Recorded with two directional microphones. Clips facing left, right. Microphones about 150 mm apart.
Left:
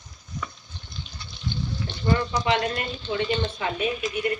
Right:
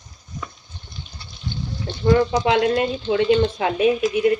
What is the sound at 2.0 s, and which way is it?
A woman's voice, 80° right.